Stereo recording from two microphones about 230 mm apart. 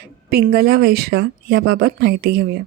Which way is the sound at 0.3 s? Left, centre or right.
Right.